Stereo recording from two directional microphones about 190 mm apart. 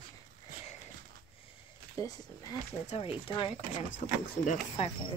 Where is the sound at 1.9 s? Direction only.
20° left (ahead or behind).